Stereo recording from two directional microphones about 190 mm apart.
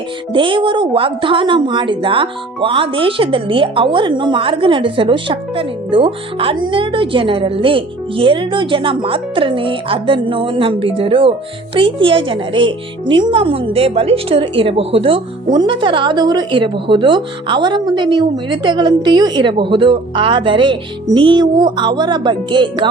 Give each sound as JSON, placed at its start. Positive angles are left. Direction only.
{"t": 0.3, "sound": "a woman's voice", "side_deg": -25}